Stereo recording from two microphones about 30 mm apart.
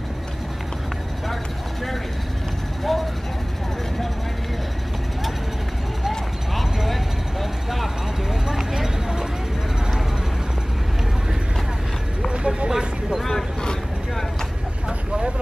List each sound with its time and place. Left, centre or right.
2.9 s vehicle: centre
6.0 s clip-clop: centre
8.5 s a sound: centre
12.3 s a sound: right
13.3 s vehicle: left
14.9 s vehicle: right